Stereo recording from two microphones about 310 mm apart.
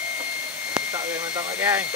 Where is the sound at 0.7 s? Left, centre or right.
Centre.